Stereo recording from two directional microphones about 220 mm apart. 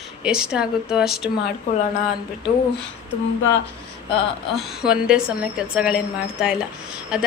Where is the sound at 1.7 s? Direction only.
35° left (ahead or behind).